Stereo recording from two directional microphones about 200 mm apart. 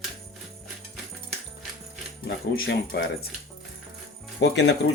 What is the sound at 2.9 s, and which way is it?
Speech, 55° left (ahead or behind).